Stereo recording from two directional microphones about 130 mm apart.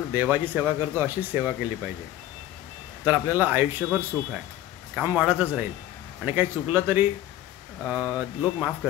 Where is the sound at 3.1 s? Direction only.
15° right (ahead or behind).